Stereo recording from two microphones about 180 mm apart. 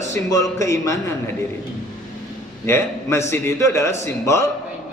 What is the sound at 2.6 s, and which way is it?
A man's voice, 15° left (ahead or behind).